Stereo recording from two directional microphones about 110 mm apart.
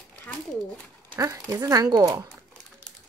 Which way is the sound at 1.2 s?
30° right (ahead or behind).